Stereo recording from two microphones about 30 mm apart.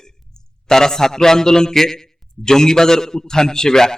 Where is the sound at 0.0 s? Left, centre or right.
Centre.